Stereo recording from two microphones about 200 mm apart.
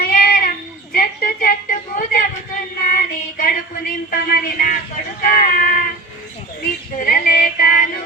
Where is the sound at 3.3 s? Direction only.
45° left (ahead or behind).